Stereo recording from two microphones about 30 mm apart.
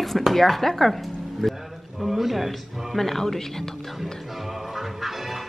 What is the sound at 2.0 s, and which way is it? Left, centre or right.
Speech, centre.